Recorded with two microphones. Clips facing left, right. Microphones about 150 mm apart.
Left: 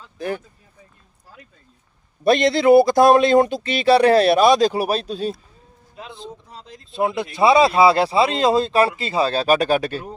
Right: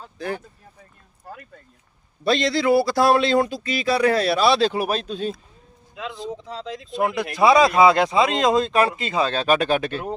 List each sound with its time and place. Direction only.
1.2 s speech: 60° right (ahead or behind)
2.2 s speech: 55° left (ahead or behind)
2.5 s speech: 20° left (ahead or behind)
2.9 s speech: 45° left (ahead or behind)
3.4 s speech: 25° left (ahead or behind)
3.8 s speech: 70° left (ahead or behind); by 5.3 s 35° left (ahead or behind)
6.0 s speech: 90° right
6.9 s speech: 25° left (ahead or behind)